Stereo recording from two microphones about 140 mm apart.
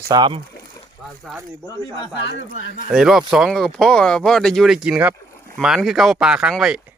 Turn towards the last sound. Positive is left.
turn(degrees=-5)  # may be behind; listen again after turning